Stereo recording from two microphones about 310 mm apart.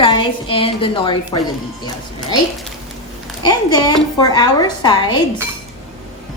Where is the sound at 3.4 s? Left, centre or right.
Centre.